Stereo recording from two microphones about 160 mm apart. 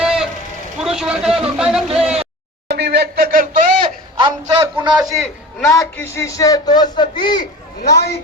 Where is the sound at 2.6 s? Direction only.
90° right; by 3.5 s 65° right (ahead or behind).